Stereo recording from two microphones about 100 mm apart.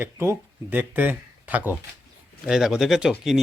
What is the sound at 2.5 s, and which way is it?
Speech, 5° right (ahead or behind).